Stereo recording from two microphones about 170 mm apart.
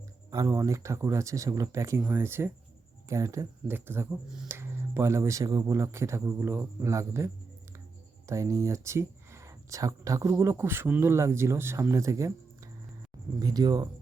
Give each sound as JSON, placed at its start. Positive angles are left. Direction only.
{"t": 0.3, "sound": "speech", "side_deg": -20}
{"t": 8.3, "sound": "speech", "side_deg": -20}
{"t": 13.4, "sound": "speech", "side_deg": -25}